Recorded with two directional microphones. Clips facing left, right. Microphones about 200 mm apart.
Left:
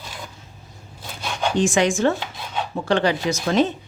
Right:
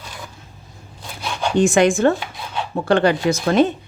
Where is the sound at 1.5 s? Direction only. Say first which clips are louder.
Right 5 dB; 60° right (ahead or behind).